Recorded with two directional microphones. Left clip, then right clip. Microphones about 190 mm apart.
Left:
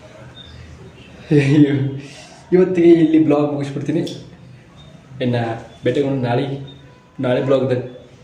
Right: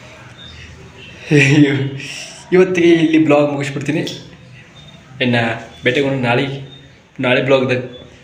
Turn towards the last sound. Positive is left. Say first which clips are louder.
# right 3 dB
turn(degrees=10)  # may be behind; listen again after turning